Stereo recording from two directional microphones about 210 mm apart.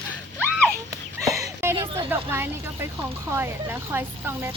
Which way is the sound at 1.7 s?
25° right (ahead or behind).